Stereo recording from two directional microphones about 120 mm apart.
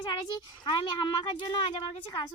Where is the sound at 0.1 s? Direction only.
40° left (ahead or behind).